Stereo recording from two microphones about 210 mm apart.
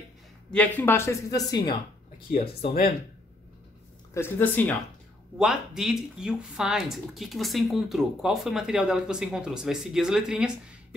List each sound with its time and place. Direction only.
0.5 s speech: 5° left (ahead or behind)
2.3 s speech: 30° left (ahead or behind)
4.1 s speech: 10° left (ahead or behind)
5.4 s speech: centre (ahead or behind)